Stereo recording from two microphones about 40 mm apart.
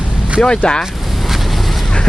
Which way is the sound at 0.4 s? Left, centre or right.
Left.